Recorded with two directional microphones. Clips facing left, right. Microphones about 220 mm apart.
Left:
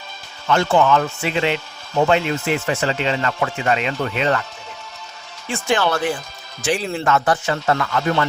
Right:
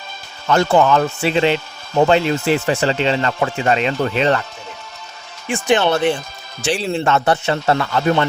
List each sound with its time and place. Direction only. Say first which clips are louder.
0.4 s speech: right 2 dB; 40° right (ahead or behind)
5.5 s speech: right 4 dB; 15° right (ahead or behind)